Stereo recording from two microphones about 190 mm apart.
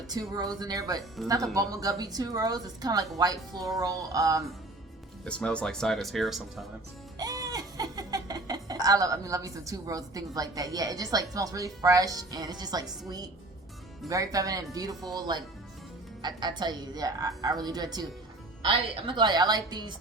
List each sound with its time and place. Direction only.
0.1 s a woman's voice: 20° right (ahead or behind)
5.2 s speech: 5° left (ahead or behind)
7.2 s a woman's voice: 20° right (ahead or behind)